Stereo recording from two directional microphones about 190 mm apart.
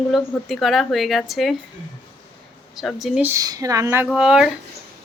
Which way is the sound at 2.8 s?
Centre (ahead or behind).